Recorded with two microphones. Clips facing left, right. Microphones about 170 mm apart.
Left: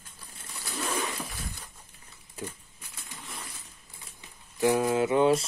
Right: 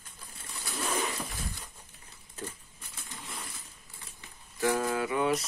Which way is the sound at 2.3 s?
10° left (ahead or behind).